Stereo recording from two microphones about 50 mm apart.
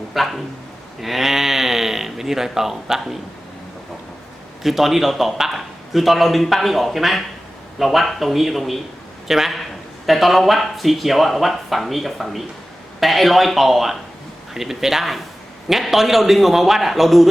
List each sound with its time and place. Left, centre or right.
0.1 s speech: centre
1.0 s a sound: centre
4.6 s a man's voice: centre